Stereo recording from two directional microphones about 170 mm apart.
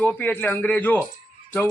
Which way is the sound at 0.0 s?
10° left (ahead or behind).